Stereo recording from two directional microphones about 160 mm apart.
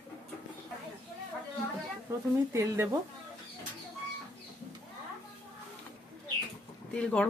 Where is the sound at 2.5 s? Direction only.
15° right (ahead or behind).